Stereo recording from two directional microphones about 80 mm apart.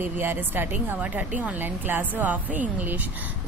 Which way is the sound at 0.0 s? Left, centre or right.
Right.